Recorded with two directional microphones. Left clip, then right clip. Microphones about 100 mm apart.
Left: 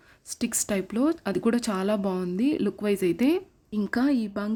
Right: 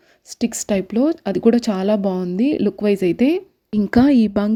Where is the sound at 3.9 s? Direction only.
60° right (ahead or behind).